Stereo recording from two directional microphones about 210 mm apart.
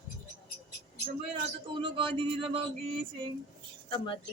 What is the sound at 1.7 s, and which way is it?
Speech, 25° right (ahead or behind).